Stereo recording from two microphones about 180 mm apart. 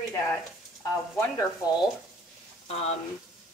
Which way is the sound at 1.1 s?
20° left (ahead or behind).